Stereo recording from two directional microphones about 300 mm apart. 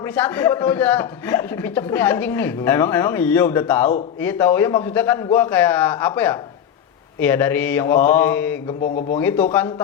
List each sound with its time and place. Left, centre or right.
0.2 s speech: centre
8.8 s a man's voice: left
9.1 s speech: centre